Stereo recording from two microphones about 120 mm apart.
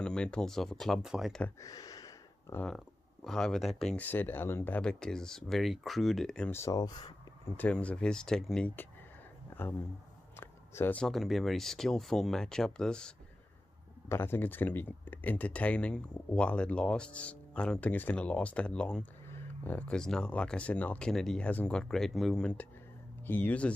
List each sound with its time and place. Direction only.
0.0 s speech: 5° left (ahead or behind)
1.6 s a sound: 30° left (ahead or behind)
3.3 s speech: 5° left (ahead or behind)
6.5 s speech: 25° left (ahead or behind)
7.5 s speech: 10° left (ahead or behind)
10.3 s a sound: 20° left (ahead or behind)
11.0 s speech: centre (ahead or behind)
14.0 s speech: 20° left (ahead or behind)
19.2 s speech: 20° left (ahead or behind)